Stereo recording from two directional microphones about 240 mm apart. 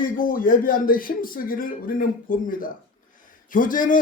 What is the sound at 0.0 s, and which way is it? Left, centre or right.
A man's voice, left.